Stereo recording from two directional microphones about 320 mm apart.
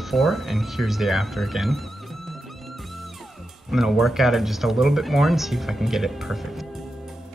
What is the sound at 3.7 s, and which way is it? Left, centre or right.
Speech, centre.